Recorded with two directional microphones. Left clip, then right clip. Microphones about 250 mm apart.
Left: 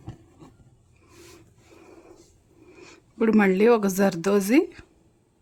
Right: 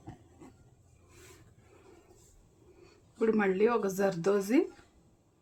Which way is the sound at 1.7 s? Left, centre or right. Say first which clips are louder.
Left 9 dB; left.